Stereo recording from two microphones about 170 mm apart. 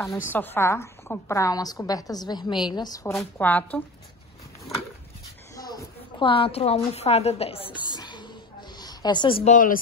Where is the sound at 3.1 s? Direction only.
10° left (ahead or behind).